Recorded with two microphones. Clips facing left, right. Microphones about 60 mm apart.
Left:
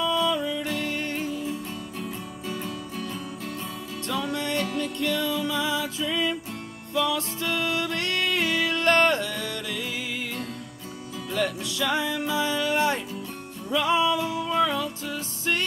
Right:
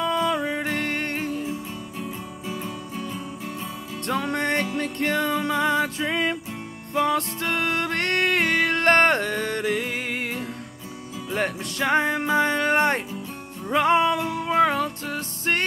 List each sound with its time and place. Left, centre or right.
0.0 s music: right
1.4 s music: centre
4.1 s music: right
11.3 s music: right